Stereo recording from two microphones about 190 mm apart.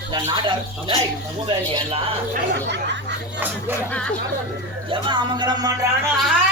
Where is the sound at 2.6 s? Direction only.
65° right (ahead or behind).